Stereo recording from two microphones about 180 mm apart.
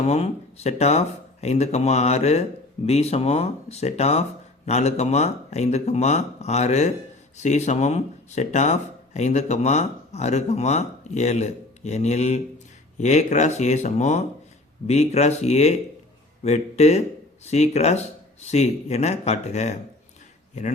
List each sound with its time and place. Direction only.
0.1 s speech: 35° left (ahead or behind)